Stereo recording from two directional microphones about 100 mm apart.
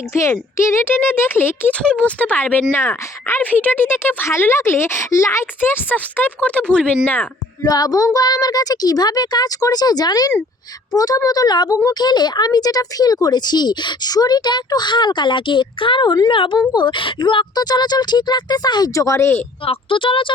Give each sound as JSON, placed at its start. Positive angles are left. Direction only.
{"t": 0.2, "sound": "speech", "side_deg": 30}
{"t": 1.8, "sound": "speech", "side_deg": 10}
{"t": 7.6, "sound": "a woman's voice", "side_deg": 40}
{"t": 16.3, "sound": "speech", "side_deg": 60}
{"t": 19.6, "sound": "speech", "side_deg": 65}